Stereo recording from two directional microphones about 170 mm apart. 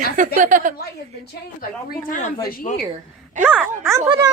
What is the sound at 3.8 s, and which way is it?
Speech, 15° right (ahead or behind).